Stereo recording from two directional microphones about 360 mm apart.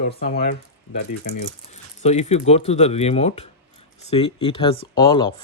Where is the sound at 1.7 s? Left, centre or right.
Centre.